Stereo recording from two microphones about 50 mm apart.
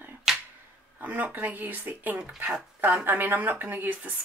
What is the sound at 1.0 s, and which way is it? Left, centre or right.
Speech, right.